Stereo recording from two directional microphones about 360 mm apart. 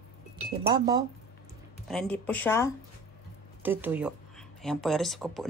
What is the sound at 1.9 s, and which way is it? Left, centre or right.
Speech, centre.